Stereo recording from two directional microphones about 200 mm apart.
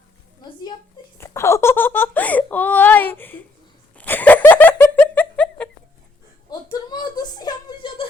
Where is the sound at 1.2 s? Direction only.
15° left (ahead or behind).